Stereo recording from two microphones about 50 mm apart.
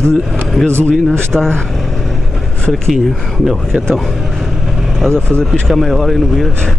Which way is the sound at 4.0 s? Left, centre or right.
Centre.